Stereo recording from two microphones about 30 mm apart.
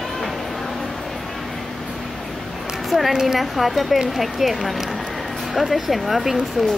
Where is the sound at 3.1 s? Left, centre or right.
Centre.